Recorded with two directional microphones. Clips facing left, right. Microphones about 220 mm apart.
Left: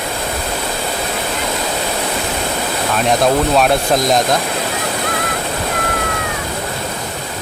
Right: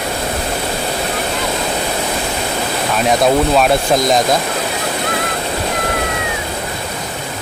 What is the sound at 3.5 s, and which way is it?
Speech, centre (ahead or behind).